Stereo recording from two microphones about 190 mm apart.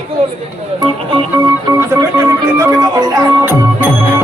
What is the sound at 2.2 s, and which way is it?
Music, 15° right (ahead or behind).